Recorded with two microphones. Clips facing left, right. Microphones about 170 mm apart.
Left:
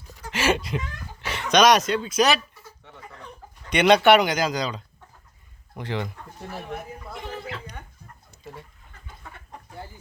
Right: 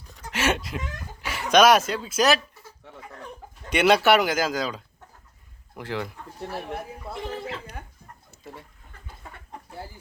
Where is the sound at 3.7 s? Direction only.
5° right (ahead or behind).